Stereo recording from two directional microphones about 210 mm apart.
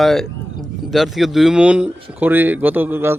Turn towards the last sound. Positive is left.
turn(degrees=-10)  # may be behind; listen again after turning